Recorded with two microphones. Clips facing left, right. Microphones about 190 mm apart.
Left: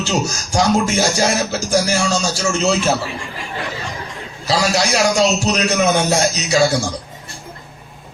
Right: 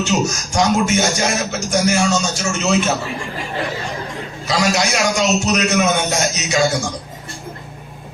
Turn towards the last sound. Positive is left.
turn(degrees=30)  # may be behind; listen again after turning